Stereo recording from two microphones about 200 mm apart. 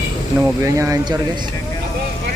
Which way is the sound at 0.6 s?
15° right (ahead or behind).